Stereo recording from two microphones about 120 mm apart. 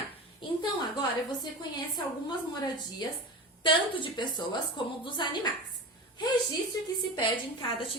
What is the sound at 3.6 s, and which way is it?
A woman's voice, 45° left (ahead or behind).